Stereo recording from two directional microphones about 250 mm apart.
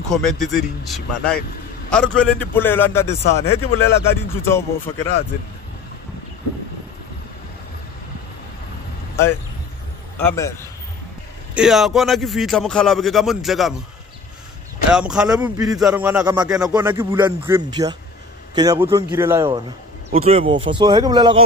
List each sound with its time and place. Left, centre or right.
0.1 s a man's voice: centre
10.2 s a man's voice: centre
11.5 s speech: centre
14.9 s speech: centre
20.1 s speech: right